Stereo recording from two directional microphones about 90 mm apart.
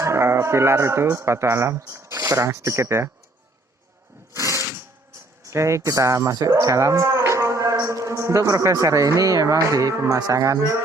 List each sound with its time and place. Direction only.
0.0 s speech: 30° right (ahead or behind)
4.4 s a sound: 35° right (ahead or behind)
5.4 s cattle: 35° right (ahead or behind)